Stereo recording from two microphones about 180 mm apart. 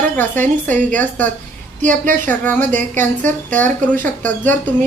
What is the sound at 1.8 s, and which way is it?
Speech, 45° right (ahead or behind).